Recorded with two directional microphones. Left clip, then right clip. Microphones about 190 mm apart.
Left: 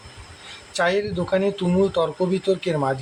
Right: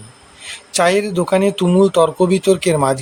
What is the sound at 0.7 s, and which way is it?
Speech, 35° right (ahead or behind).